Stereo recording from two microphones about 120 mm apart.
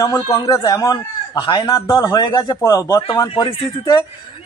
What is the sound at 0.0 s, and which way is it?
Speech, 25° left (ahead or behind).